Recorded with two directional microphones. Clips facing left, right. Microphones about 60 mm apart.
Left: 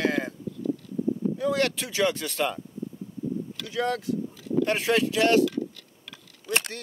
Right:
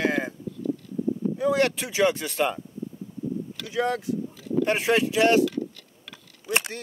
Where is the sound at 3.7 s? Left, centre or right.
Centre.